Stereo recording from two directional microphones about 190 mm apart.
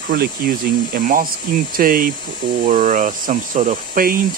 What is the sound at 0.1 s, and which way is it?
Speech, 55° right (ahead or behind).